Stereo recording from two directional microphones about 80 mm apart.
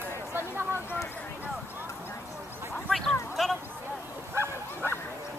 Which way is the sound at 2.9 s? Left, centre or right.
Centre.